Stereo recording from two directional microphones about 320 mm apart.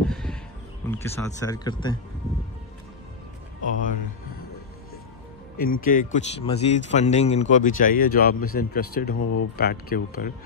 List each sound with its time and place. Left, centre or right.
0.0 s music: centre
0.8 s speech: centre
5.6 s speech: left
9.6 s speech: left